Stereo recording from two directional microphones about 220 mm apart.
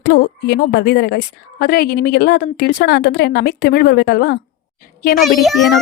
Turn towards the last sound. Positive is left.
turn(degrees=0)  # may be behind; listen again after turning